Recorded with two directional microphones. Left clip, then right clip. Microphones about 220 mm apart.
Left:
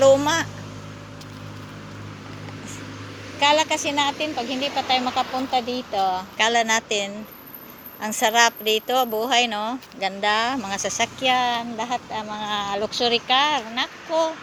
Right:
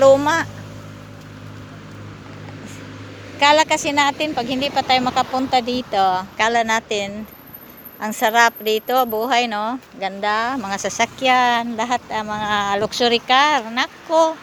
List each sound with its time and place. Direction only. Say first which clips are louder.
0.0 s vehicle: right 3 dB; 10° right (ahead or behind)
3.4 s a woman's voice: right 5 dB; 60° right (ahead or behind)
3.7 s a woman's voice: right 5 dB; 25° right (ahead or behind)
6.4 s speech: right 1 dB; 10° right (ahead or behind)
10.8 s a woman's voice: right 4 dB; 20° right (ahead or behind)
12.5 s speech: right 6 dB; 75° right (ahead or behind)
13.2 s speech: right 5 dB; 70° right (ahead or behind)
14.1 s speech: right 7 dB; 30° right (ahead or behind)